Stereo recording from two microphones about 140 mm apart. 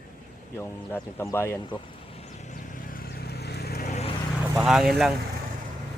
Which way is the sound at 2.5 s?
65° left (ahead or behind).